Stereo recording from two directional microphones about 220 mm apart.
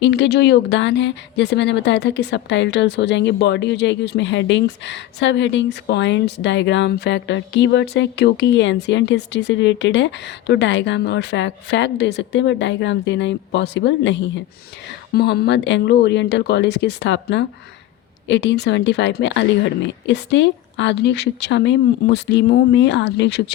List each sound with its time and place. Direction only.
0.0 s a woman's voice: 50° left (ahead or behind)